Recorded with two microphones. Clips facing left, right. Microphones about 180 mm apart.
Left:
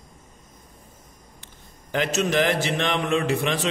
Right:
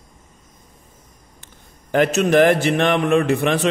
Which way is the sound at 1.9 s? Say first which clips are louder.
Right 7 dB; 55° right (ahead or behind).